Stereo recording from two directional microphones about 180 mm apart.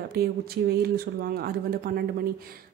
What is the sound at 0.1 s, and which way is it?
Speech, 60° right (ahead or behind).